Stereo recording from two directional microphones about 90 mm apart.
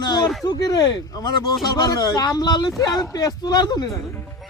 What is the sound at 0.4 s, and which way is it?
Speech, 45° left (ahead or behind).